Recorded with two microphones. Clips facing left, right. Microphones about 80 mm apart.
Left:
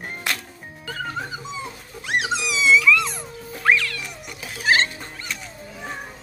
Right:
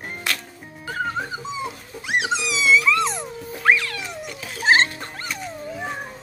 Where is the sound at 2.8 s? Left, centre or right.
Right.